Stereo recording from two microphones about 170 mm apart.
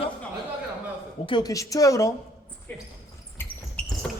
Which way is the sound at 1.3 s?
25° left (ahead or behind).